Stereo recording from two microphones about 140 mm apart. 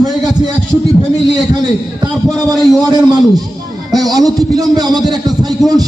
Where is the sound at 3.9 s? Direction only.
25° right (ahead or behind).